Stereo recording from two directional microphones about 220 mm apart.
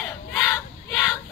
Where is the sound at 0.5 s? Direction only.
15° left (ahead or behind).